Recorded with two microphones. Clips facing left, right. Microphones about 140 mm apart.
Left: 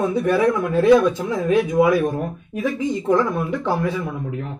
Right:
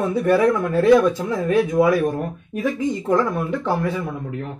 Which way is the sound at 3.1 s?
15° left (ahead or behind).